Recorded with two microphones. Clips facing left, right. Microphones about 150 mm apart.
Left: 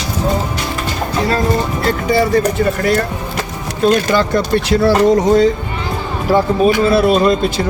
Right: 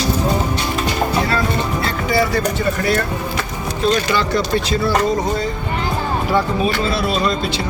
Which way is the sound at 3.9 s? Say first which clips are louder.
Left 4 dB; 50° left (ahead or behind).